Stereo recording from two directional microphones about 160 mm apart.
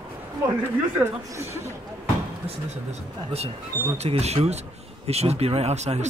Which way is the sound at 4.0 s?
40° right (ahead or behind).